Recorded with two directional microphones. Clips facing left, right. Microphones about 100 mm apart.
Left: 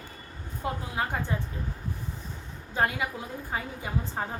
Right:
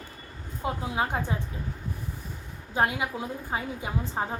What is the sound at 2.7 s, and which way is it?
A woman's voice, 20° right (ahead or behind).